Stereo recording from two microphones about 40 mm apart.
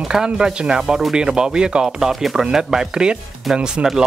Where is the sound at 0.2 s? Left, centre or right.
Right.